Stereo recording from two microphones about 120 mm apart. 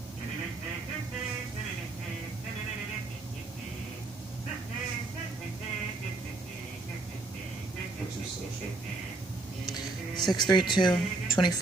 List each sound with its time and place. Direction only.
9.7 s music: 35° left (ahead or behind)
10.3 s speech: 40° left (ahead or behind)